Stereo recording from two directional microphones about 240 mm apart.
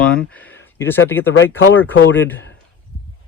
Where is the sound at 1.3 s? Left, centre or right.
Left.